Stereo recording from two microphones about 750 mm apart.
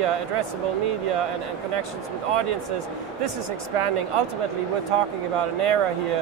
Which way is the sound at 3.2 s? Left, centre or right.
Right.